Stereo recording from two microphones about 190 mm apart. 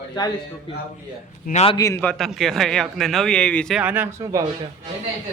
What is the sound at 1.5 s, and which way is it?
Speech, 35° left (ahead or behind).